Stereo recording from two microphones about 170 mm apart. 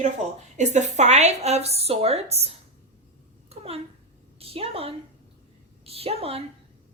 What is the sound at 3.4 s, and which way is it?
Babbling, 35° right (ahead or behind).